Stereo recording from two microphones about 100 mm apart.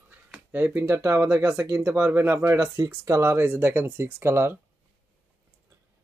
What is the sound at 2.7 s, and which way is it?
Speech, 35° right (ahead or behind).